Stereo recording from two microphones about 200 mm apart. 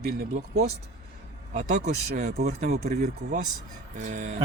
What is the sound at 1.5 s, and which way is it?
Speech, 35° right (ahead or behind).